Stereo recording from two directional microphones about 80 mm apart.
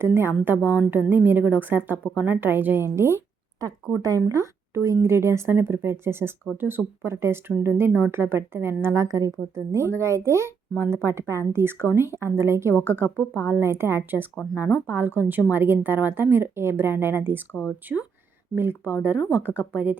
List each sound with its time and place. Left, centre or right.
0.0 s speech: right
9.0 s speech: right
17.5 s speech: left
18.5 s speech: right